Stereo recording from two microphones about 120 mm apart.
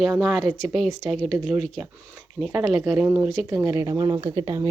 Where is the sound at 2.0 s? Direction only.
15° right (ahead or behind).